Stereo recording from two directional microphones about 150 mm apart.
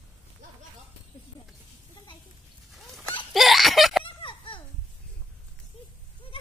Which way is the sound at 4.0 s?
35° left (ahead or behind).